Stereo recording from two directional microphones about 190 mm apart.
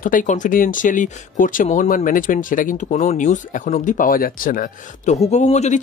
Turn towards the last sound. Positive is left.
turn(degrees=35)  # may be behind; listen again after turning